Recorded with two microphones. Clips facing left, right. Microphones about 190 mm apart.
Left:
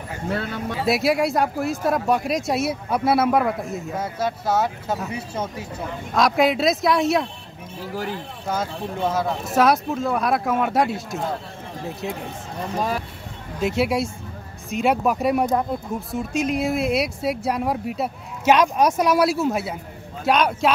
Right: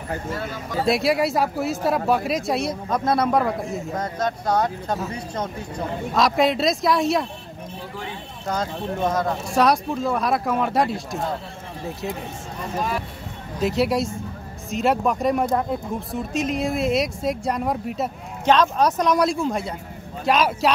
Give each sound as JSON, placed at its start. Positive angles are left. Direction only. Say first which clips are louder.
{"t": 0.3, "sound": "speech", "louder": "left 3 dB", "side_deg": 65}
{"t": 0.8, "sound": "speech", "louder": "even", "side_deg": 0}
{"t": 8.5, "sound": "speech", "louder": "right 1 dB", "side_deg": 5}
{"t": 13.6, "sound": "speech", "louder": "even", "side_deg": 0}